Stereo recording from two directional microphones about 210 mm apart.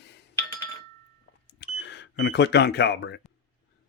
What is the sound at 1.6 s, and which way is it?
Speech, 60° left (ahead or behind).